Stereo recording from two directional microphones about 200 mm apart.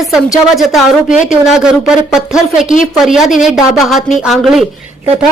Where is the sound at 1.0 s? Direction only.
40° left (ahead or behind).